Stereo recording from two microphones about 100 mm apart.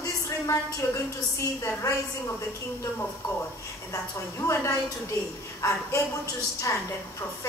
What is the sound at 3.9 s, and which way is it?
A woman's voice, 30° left (ahead or behind).